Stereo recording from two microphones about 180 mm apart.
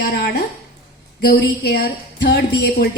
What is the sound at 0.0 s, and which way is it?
A woman's voice, 55° left (ahead or behind).